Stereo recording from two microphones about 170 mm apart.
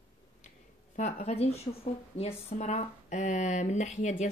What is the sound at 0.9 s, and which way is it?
Speech, 40° left (ahead or behind).